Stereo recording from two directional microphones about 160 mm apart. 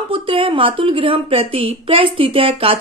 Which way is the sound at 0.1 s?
35° right (ahead or behind).